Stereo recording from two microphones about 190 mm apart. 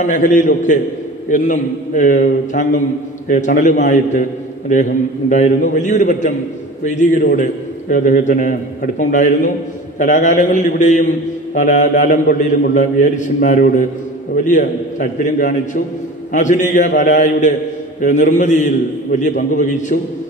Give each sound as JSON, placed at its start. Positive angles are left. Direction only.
{"t": 0.0, "sound": "a man's voice", "side_deg": 40}